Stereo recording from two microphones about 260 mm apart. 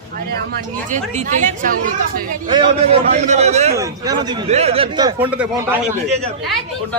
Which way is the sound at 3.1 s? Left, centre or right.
Right.